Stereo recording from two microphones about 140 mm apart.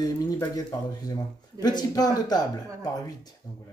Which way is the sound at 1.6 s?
30° left (ahead or behind).